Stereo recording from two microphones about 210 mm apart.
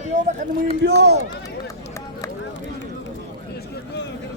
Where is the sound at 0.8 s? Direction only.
55° right (ahead or behind).